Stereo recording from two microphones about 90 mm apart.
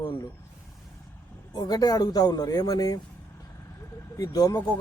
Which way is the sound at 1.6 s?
45° left (ahead or behind).